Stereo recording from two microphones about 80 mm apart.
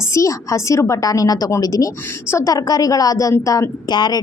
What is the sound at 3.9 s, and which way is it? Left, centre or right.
Speech, left.